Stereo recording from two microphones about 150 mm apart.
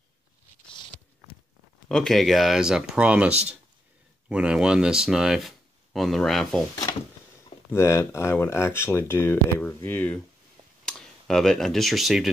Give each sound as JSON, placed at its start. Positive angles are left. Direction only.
{"t": 1.9, "sound": "speech", "side_deg": 5}
{"t": 6.7, "sound": "drawer open or close", "side_deg": 25}
{"t": 7.7, "sound": "speech", "side_deg": 20}